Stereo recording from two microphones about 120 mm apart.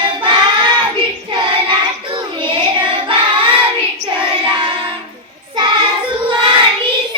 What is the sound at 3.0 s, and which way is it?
Singing, 45° right (ahead or behind).